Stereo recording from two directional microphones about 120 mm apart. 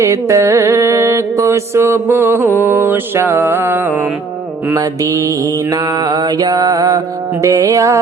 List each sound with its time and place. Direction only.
0.0 s music: 25° right (ahead or behind)
4.8 s music: 25° right (ahead or behind)
5.7 s mantra: 40° right (ahead or behind)
7.4 s music: 25° right (ahead or behind)